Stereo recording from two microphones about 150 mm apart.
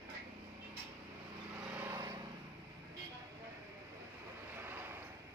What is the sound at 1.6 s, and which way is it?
Vehicle, 10° right (ahead or behind).